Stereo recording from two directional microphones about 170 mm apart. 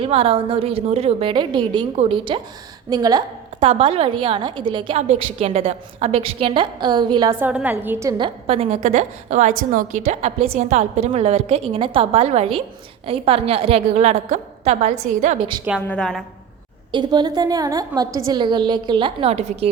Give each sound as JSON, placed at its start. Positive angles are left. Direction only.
{"t": 0.0, "sound": "a woman's voice", "side_deg": -35}
{"t": 7.3, "sound": "a woman's voice", "side_deg": -10}
{"t": 8.2, "sound": "a woman's voice", "side_deg": -35}
{"t": 15.4, "sound": "a woman's voice", "side_deg": -30}
{"t": 15.9, "sound": "a woman's voice", "side_deg": 5}
{"t": 16.9, "sound": "a woman's voice", "side_deg": -25}